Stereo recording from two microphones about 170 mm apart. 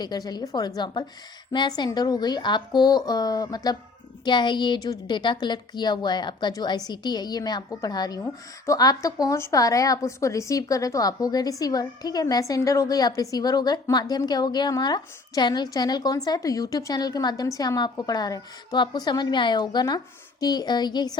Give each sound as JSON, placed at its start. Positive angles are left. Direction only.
{"t": 0.0, "sound": "a woman's voice", "side_deg": 25}